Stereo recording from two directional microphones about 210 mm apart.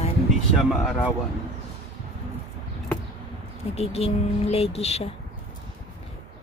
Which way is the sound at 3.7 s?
30° left (ahead or behind).